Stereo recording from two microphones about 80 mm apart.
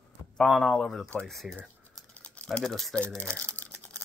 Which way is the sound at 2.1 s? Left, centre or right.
Centre.